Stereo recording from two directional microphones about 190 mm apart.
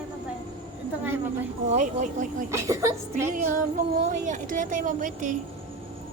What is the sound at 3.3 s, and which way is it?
Speech, 45° right (ahead or behind).